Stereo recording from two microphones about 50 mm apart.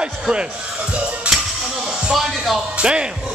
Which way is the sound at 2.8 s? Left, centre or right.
Centre.